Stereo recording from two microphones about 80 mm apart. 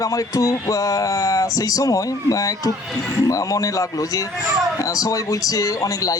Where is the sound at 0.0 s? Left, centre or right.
Left.